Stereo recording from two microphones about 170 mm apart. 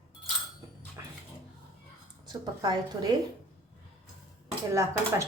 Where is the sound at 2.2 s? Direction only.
25° right (ahead or behind).